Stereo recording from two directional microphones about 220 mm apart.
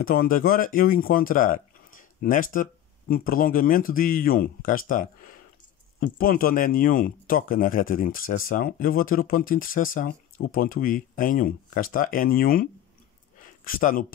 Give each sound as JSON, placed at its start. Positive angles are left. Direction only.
{"t": 0.0, "sound": "speech", "side_deg": 40}
{"t": 13.7, "sound": "speech", "side_deg": 40}